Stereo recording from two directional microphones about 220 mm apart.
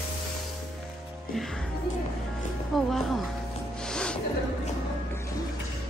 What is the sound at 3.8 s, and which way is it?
Music, 5° left (ahead or behind).